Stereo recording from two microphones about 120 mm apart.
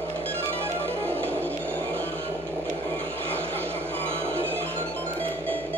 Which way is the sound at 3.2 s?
20° right (ahead or behind).